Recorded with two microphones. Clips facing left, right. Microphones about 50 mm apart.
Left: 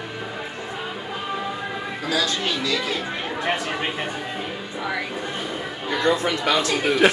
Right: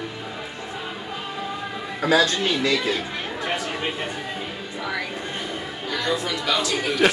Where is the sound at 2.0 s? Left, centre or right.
Right.